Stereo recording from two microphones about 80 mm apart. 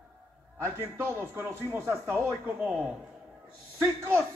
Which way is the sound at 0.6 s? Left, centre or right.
Right.